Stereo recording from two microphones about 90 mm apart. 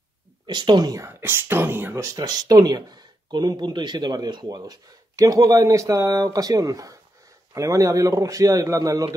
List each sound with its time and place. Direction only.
0.5 s speech: 55° right (ahead or behind)
1.0 s a man's voice: 25° right (ahead or behind)